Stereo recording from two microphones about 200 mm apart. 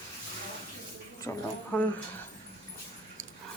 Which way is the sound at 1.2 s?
10° left (ahead or behind).